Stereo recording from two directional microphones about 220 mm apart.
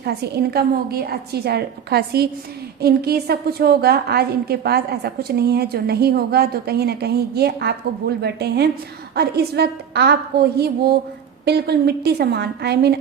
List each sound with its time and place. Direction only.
0.0 s a woman's voice: 45° right (ahead or behind)